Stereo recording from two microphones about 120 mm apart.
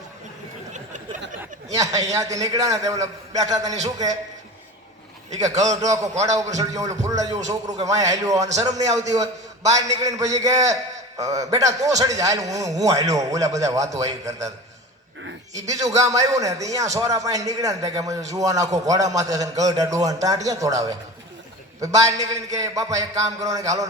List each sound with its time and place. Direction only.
0.7 s a sound: 90° right
1.7 s a man's voice: 30° right (ahead or behind)
5.4 s a man's voice: 30° right (ahead or behind)
15.5 s a man's voice: 30° right (ahead or behind)